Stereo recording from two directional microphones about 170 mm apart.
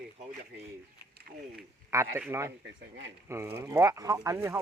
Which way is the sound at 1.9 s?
15° right (ahead or behind).